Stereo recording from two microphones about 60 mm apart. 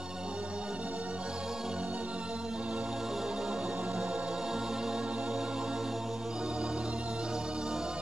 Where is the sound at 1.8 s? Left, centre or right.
Right.